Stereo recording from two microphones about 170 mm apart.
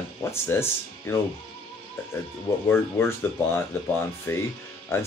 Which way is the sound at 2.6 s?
15° left (ahead or behind).